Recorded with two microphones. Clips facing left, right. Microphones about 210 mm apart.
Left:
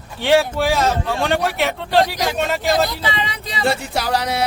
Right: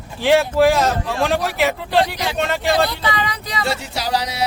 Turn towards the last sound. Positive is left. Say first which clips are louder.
# left 2 dB
turn(degrees=55)  # may be behind; listen again after turning